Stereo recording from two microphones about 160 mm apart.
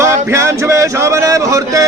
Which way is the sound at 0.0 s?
15° right (ahead or behind).